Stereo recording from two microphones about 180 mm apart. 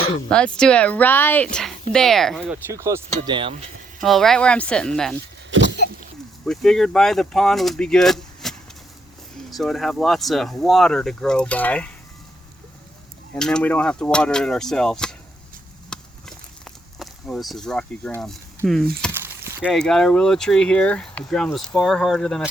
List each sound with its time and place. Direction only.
0.3 s speech: 5° left (ahead or behind)
2.6 s speech: 15° right (ahead or behind)
3.2 s speech: 25° right (ahead or behind)
3.5 s a sound: 45° right (ahead or behind)
4.0 s speech: centre (ahead or behind)
5.6 s cough: 65° left (ahead or behind)
6.4 s speech: 5° left (ahead or behind)
13.3 s speech: 5° left (ahead or behind)
15.9 s a sound: 5° left (ahead or behind)
18.2 s speech: 5° left (ahead or behind)
19.1 s a sound: 10° right (ahead or behind)
19.7 s speech: 5° left (ahead or behind)